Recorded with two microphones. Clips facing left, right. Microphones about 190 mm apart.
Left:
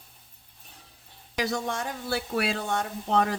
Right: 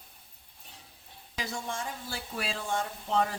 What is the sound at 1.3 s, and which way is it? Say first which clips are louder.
Speech: left 7 dB; 70° left (ahead or behind).